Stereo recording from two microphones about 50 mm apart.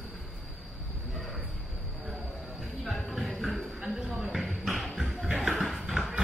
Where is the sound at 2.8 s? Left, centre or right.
Centre.